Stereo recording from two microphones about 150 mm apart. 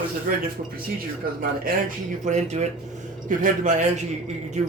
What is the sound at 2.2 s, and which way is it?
A man's voice, 50° right (ahead or behind).